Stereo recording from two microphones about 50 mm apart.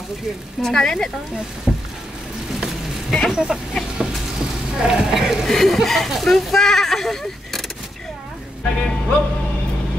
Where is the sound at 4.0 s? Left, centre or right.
Centre.